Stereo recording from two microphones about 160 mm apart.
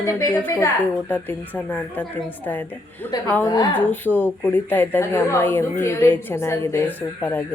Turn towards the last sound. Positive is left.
turn(degrees=15)  # may be behind; listen again after turning